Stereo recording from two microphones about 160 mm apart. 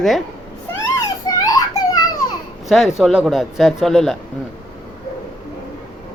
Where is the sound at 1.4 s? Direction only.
20° left (ahead or behind).